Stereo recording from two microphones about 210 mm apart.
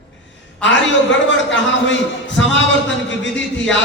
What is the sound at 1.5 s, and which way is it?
A man's voice, 60° left (ahead or behind).